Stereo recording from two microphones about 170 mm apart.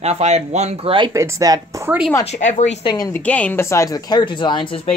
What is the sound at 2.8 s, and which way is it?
Speech, 25° left (ahead or behind).